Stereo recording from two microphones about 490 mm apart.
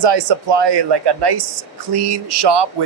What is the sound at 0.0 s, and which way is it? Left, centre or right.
Speech, right.